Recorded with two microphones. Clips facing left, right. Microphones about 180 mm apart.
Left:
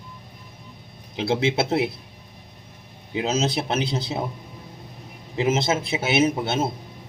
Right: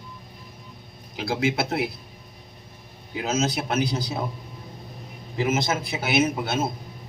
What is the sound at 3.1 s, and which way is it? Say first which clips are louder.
A man's voice: left 2 dB; 30° left (ahead or behind).